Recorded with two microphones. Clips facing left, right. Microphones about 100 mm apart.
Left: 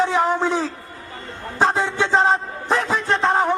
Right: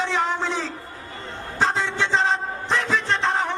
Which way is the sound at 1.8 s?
45° left (ahead or behind).